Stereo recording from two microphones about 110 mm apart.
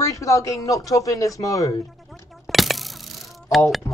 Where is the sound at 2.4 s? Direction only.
Centre (ahead or behind).